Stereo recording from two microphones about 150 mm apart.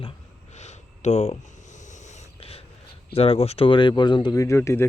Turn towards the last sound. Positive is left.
turn(degrees=20)  # may be behind; listen again after turning